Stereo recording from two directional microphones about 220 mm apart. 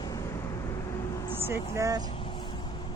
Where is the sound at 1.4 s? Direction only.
15° right (ahead or behind).